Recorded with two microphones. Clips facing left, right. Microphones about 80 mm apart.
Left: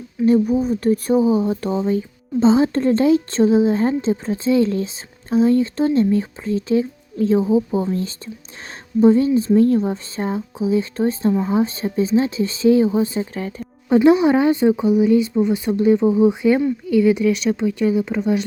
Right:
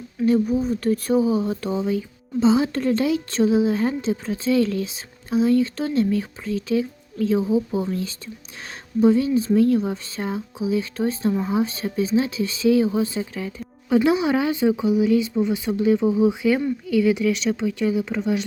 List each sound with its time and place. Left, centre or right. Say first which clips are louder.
0.3 s speech: left 4 dB; left
11.3 s speech: left 4 dB; centre
11.5 s speech: left 4 dB; left
16.0 s speech: left 4 dB; left; by 18.3 s centre